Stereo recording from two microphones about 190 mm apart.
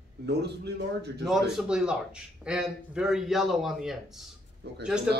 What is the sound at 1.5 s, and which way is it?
A man's voice, 5° right (ahead or behind).